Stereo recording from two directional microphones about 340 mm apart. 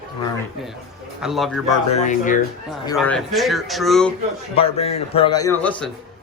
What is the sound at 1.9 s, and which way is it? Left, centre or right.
Speech, left.